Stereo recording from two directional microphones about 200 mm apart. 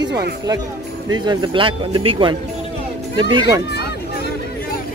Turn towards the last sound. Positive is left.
turn(degrees=55)  # may be behind; listen again after turning